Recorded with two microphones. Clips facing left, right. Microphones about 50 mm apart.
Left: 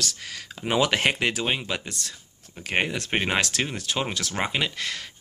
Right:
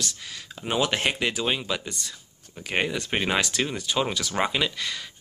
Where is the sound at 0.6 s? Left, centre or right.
Left.